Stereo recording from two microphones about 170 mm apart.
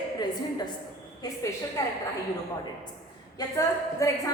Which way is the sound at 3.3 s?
20° left (ahead or behind).